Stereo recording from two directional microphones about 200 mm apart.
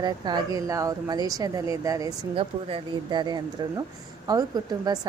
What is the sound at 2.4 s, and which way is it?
Speech, 30° right (ahead or behind).